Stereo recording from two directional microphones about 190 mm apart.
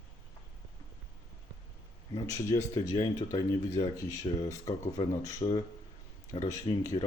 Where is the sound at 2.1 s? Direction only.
20° left (ahead or behind).